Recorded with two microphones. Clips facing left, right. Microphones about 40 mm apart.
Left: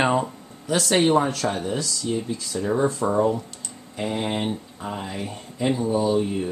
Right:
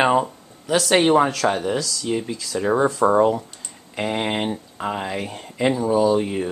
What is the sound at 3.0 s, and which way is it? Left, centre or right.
Speech, right.